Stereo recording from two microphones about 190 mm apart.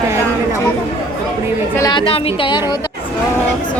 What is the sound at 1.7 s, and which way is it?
Speech, 20° left (ahead or behind).